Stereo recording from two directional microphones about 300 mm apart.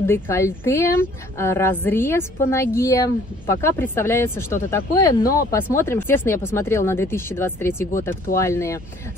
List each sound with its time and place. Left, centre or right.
0.0 s speech: centre
5.2 s speech: left
5.5 s speech: centre